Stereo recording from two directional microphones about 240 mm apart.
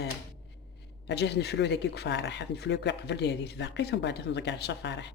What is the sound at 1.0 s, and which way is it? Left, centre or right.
Speech, left.